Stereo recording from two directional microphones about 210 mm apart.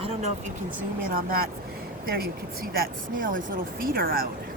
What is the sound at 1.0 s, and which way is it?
Speech, 45° right (ahead or behind).